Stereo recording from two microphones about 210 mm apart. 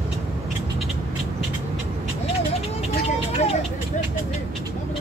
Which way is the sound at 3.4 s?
30° left (ahead or behind).